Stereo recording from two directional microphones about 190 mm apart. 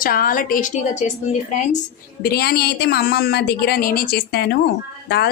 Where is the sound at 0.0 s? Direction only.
50° left (ahead or behind).